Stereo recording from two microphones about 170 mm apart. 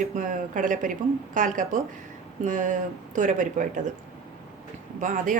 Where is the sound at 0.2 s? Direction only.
50° right (ahead or behind).